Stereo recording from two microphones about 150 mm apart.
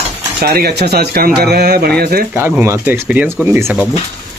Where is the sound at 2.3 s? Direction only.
15° right (ahead or behind).